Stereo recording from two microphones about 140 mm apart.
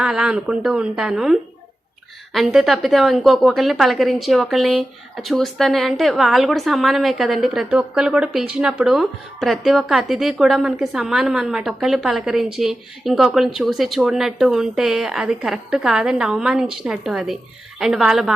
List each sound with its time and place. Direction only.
0.0 s a woman's voice: 5° right (ahead or behind)